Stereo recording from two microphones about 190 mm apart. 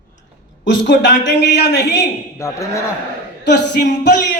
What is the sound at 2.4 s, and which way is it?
Speech, 15° left (ahead or behind).